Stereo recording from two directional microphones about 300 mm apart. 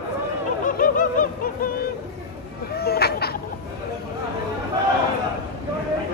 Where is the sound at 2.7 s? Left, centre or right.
Left.